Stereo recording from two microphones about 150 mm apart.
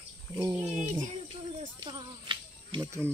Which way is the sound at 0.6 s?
45° right (ahead or behind).